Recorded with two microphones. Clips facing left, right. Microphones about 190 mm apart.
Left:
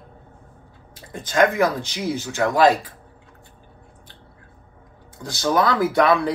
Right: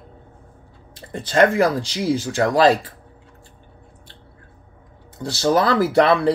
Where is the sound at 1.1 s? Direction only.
65° right (ahead or behind).